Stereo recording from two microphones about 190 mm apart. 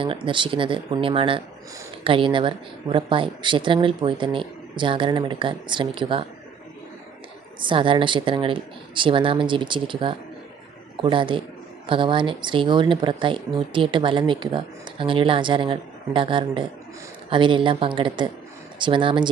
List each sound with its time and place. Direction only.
0.0 s speech: 25° right (ahead or behind)
7.6 s speech: 25° right (ahead or behind)